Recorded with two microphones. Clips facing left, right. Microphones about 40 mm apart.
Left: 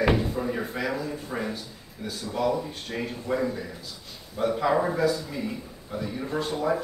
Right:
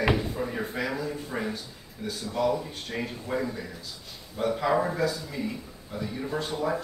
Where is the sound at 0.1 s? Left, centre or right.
Centre.